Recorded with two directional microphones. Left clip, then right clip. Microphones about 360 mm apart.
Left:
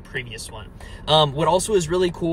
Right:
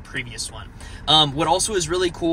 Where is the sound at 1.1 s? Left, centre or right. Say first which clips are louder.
Left 1 dB; centre.